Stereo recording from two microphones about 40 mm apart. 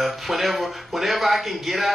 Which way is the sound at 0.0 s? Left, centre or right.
Centre.